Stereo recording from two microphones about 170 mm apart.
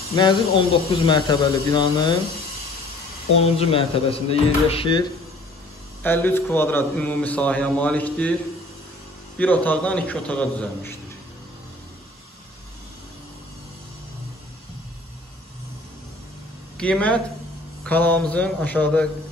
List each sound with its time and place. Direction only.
0.1 s speech: 30° left (ahead or behind)
3.3 s speech: 35° left (ahead or behind)
6.0 s a man's voice: 10° left (ahead or behind)
9.4 s a man's voice: 10° left (ahead or behind)
16.7 s a man's voice: 5° left (ahead or behind)